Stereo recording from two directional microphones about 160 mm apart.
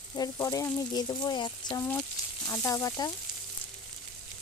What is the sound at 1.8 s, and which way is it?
Speech, 15° left (ahead or behind).